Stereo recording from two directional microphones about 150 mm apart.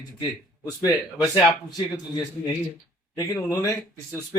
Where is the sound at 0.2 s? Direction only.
25° left (ahead or behind).